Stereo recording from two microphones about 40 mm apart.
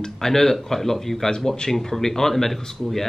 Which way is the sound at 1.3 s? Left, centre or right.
Centre.